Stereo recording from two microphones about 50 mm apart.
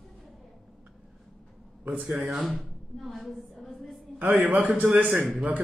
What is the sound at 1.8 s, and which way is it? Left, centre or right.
Speech, right.